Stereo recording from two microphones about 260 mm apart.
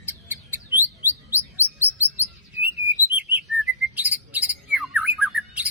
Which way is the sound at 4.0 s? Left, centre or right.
Centre.